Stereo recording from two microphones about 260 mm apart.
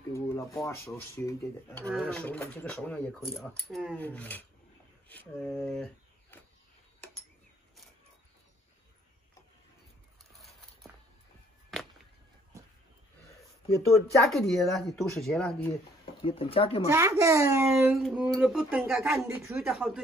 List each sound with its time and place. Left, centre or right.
0.1 s speech: centre
14.3 s speech: centre
16.1 s speech: centre
16.9 s a child's voice: centre